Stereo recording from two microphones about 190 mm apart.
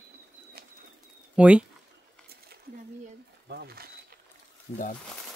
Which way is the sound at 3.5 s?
55° right (ahead or behind).